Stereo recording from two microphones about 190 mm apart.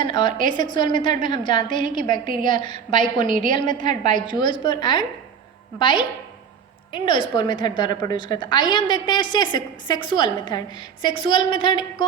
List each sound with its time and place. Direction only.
0.0 s a woman's voice: 25° left (ahead or behind)